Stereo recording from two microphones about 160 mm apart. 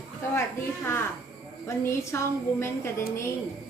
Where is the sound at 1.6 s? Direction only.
15° left (ahead or behind).